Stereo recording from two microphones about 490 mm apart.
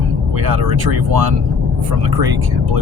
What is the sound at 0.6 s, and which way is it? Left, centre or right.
Speech, right.